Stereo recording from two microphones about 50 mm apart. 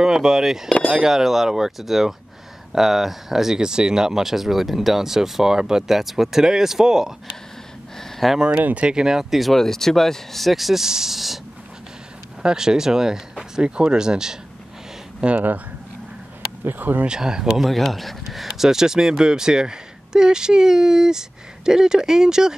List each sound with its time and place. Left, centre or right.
0.0 s speech: centre
8.0 s a sound: centre
8.7 s speech: centre
15.3 s speech: right
16.6 s speech: right
17.0 s speech: centre
17.6 s speech: centre